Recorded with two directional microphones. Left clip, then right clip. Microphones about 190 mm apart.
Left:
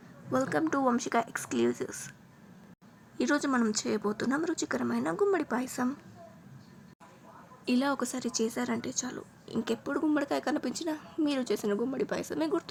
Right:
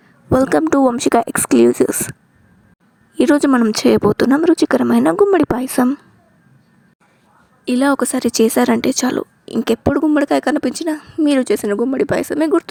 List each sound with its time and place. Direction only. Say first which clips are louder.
0.3 s speech: right 15 dB; 55° right (ahead or behind)
3.2 s speech: right 15 dB; 45° right (ahead or behind)
7.6 s speech: right 14 dB; 40° right (ahead or behind)